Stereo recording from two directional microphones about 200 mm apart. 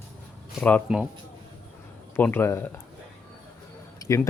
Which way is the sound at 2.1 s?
10° left (ahead or behind).